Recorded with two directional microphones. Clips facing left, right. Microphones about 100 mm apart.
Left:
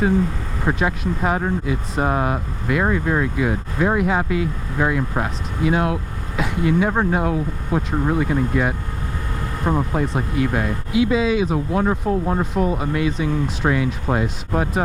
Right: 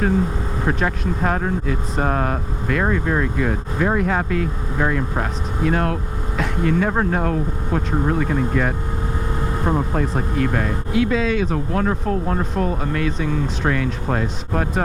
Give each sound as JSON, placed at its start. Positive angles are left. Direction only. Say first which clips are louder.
{"t": 0.7, "sound": "speech", "louder": "left 2 dB", "side_deg": 10}